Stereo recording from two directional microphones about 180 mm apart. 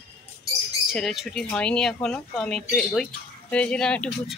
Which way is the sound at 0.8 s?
Centre (ahead or behind).